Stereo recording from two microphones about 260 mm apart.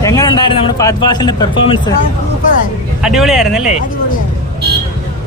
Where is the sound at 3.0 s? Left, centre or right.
Centre.